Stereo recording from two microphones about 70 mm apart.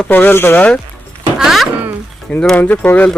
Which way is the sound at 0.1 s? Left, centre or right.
Left.